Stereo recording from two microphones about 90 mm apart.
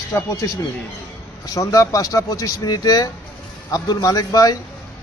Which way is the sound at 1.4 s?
40° left (ahead or behind).